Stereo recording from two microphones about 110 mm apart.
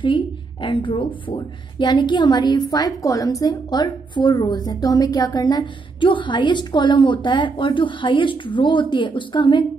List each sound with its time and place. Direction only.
0.0 s a woman's voice: 45° left (ahead or behind)